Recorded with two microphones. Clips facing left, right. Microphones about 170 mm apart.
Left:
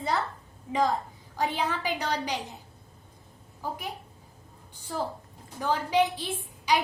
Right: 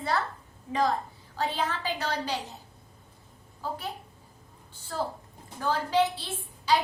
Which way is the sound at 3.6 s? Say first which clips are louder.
Even; 15° left (ahead or behind).